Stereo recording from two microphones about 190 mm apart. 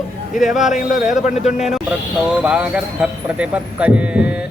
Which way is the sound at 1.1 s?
40° left (ahead or behind).